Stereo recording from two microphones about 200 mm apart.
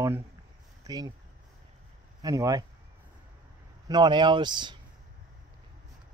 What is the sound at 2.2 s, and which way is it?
Speech, 15° right (ahead or behind).